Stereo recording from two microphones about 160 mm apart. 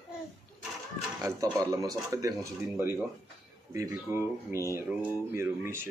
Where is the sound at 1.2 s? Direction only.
20° right (ahead or behind).